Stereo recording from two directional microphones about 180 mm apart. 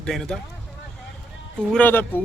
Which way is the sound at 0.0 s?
5° left (ahead or behind).